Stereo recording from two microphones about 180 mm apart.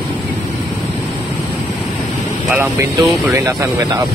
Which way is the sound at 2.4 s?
10° right (ahead or behind).